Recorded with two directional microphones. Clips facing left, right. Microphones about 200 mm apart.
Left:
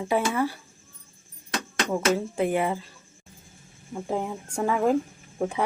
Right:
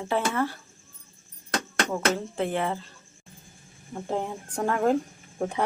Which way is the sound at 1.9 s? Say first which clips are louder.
Left 4 dB; 10° left (ahead or behind).